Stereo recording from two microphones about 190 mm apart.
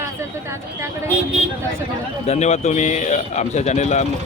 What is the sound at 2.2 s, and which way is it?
Speech, 35° left (ahead or behind).